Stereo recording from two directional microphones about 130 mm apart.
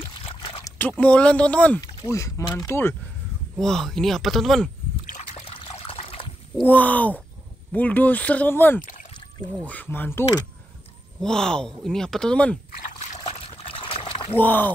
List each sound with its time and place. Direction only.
0.1 s a sound: 45° left (ahead or behind)
0.6 s speech: 15° left (ahead or behind)
2.0 s speech: 25° left (ahead or behind)
3.5 s speech: 5° left (ahead or behind)
5.0 s trickle: 70° left (ahead or behind)
5.4 s water: 45° left (ahead or behind)
6.6 s speech: 10° left (ahead or behind)
11.1 s speech: 5° left (ahead or behind)
12.8 s trickle: 65° left (ahead or behind)
13.2 s trickle: 45° left (ahead or behind)
14.3 s speech: 15° left (ahead or behind)